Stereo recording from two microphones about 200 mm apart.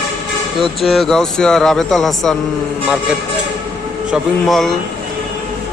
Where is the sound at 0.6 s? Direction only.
Centre (ahead or behind).